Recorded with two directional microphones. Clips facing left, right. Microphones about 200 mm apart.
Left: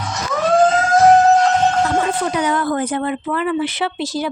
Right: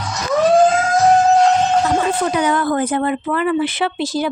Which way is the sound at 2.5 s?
55° right (ahead or behind).